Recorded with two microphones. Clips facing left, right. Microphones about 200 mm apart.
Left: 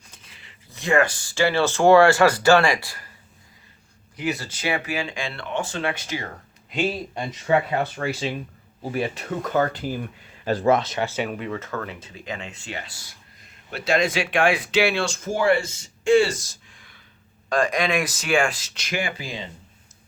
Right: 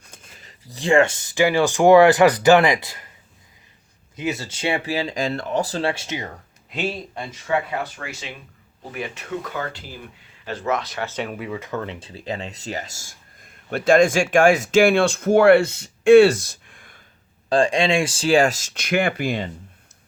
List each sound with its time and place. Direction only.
0.1 s speech: 50° right (ahead or behind); by 3.1 s 20° right (ahead or behind)
4.1 s speech: 20° right (ahead or behind)
6.7 s speech: centre (ahead or behind)
7.2 s speech: 20° left (ahead or behind)
7.9 s speech: 35° left (ahead or behind); by 9.9 s 50° left (ahead or behind)
10.4 s speech: 35° left (ahead or behind)
11.0 s speech: 5° left (ahead or behind); by 17.0 s 50° right (ahead or behind)
17.5 s speech: 30° right (ahead or behind); by 19.5 s 60° right (ahead or behind)